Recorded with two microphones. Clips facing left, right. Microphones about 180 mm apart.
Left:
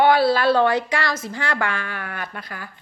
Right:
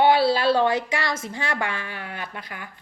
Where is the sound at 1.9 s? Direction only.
50° left (ahead or behind).